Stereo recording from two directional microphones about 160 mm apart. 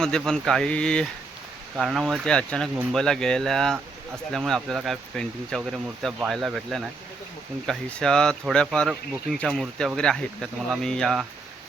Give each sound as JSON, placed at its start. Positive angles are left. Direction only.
{"t": 0.0, "sound": "speech", "side_deg": 5}